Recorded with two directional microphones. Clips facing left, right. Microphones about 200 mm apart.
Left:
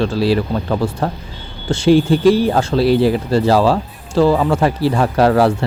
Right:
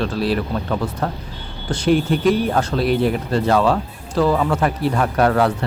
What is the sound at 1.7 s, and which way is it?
Speech, 25° left (ahead or behind).